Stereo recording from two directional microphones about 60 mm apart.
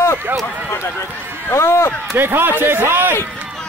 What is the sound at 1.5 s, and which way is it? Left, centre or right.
Speech, left.